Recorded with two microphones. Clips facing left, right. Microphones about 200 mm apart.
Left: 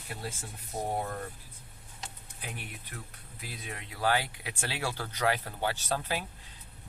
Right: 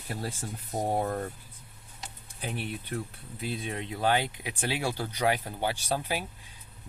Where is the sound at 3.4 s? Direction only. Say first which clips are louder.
Right 9 dB; 25° right (ahead or behind).